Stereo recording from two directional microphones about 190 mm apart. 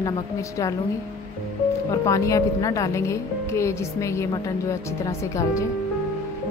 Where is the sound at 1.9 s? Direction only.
15° left (ahead or behind).